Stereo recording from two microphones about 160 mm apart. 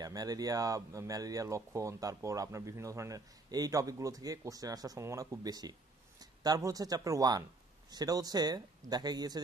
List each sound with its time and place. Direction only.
0.0 s speech: 25° right (ahead or behind)